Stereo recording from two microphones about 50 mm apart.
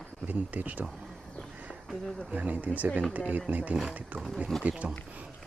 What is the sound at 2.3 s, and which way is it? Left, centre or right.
A man's voice, right.